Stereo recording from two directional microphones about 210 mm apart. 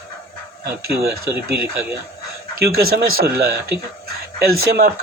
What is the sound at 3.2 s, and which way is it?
Speech, 45° right (ahead or behind).